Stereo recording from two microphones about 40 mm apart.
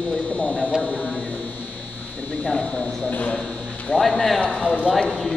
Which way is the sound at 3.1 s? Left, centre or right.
Left.